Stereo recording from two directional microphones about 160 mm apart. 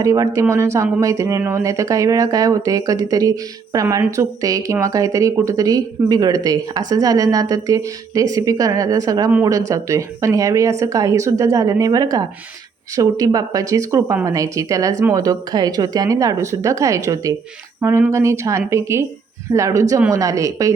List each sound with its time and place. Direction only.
0.0 s speech: 20° right (ahead or behind)